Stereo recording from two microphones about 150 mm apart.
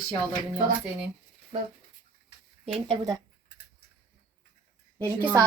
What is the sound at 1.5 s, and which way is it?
Speech, 40° right (ahead or behind).